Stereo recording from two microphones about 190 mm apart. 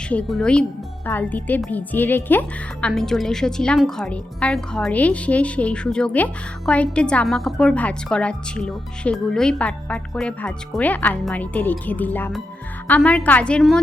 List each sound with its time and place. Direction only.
0.1 s a woman's voice: 5° left (ahead or behind)